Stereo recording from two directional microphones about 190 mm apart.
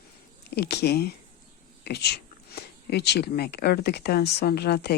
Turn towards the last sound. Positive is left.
turn(degrees=60)  # may be behind; listen again after turning